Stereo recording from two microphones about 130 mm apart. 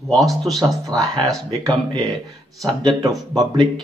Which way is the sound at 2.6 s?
35° right (ahead or behind).